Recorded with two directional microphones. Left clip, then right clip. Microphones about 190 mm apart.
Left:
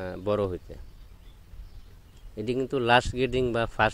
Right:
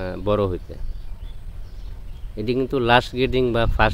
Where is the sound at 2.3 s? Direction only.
30° left (ahead or behind).